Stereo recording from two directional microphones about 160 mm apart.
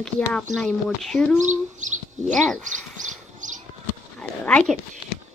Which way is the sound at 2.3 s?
Centre (ahead or behind).